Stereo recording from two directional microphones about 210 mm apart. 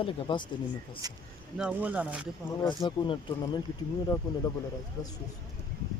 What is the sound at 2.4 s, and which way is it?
Speech, 20° left (ahead or behind).